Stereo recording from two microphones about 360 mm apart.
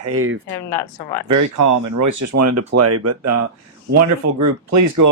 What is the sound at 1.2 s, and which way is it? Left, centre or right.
Speech, right.